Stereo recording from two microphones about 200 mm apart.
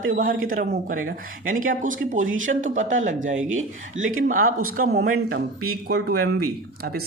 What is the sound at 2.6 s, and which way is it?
Speech, 40° right (ahead or behind).